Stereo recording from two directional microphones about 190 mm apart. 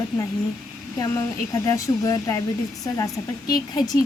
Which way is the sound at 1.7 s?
15° left (ahead or behind).